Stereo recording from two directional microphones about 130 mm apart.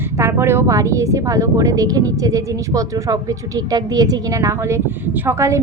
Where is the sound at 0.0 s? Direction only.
20° right (ahead or behind).